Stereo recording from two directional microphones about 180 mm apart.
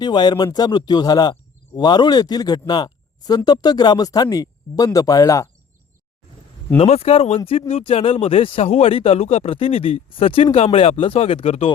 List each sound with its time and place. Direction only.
0.0 s speech: 25° left (ahead or behind)
6.7 s speech: 35° left (ahead or behind)